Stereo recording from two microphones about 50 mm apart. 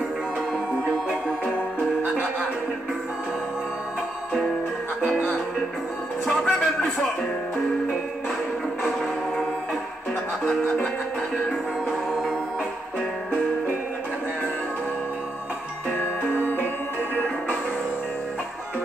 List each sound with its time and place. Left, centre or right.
6.2 s music: centre
16.2 s music: left